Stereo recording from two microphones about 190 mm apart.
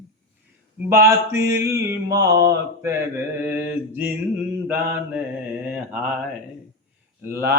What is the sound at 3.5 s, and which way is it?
Mantra, 10° right (ahead or behind).